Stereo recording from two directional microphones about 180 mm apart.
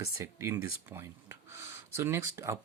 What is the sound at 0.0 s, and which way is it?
Speech, 15° right (ahead or behind).